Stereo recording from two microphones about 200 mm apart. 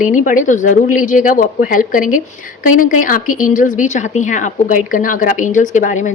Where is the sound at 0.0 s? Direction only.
40° left (ahead or behind).